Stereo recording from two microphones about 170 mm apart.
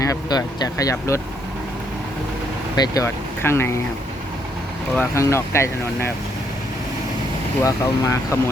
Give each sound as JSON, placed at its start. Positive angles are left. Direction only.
{"t": 0.0, "sound": "speech", "side_deg": 20}
{"t": 2.7, "sound": "speech", "side_deg": 20}
{"t": 4.9, "sound": "speech", "side_deg": 15}
{"t": 7.6, "sound": "speech", "side_deg": 15}